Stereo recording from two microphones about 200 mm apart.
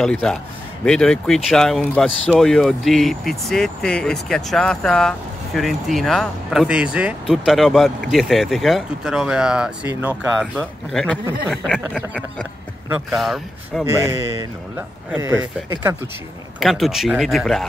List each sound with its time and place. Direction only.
0.0 s speech: 5° left (ahead or behind)
13.1 s speech: centre (ahead or behind)
14.8 s a man's voice: 10° right (ahead or behind)
16.5 s speech: centre (ahead or behind)